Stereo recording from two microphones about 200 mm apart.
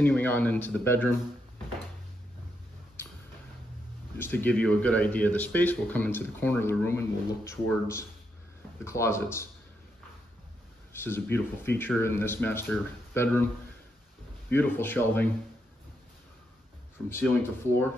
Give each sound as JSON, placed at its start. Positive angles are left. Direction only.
{"t": 0.0, "sound": "speech", "side_deg": 10}
{"t": 4.2, "sound": "speech", "side_deg": 10}
{"t": 10.9, "sound": "speech", "side_deg": 10}
{"t": 14.5, "sound": "speech", "side_deg": 10}
{"t": 17.1, "sound": "speech", "side_deg": 10}